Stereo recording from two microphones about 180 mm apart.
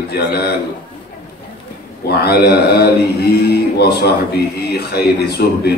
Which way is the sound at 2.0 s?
60° left (ahead or behind).